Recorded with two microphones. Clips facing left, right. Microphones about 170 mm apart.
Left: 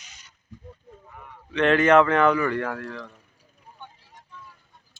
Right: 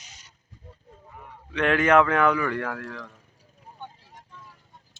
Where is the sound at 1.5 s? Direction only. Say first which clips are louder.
Left 2 dB; 10° right (ahead or behind).